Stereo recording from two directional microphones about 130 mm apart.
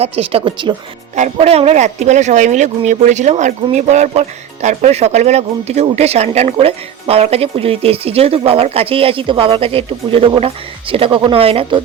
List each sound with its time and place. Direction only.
0.0 s speech: 45° right (ahead or behind)
1.1 s speech: 55° right (ahead or behind)